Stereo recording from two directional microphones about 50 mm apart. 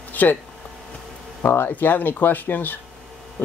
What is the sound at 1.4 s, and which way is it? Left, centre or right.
Speech, left.